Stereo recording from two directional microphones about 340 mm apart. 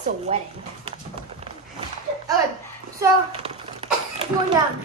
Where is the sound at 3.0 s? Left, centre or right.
Centre.